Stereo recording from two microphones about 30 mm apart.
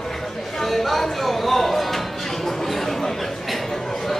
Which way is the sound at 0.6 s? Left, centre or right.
Centre.